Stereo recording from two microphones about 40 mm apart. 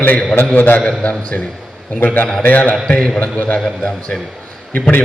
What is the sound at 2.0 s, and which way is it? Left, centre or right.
Speech, left.